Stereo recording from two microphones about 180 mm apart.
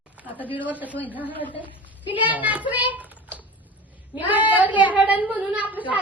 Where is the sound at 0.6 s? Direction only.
10° right (ahead or behind).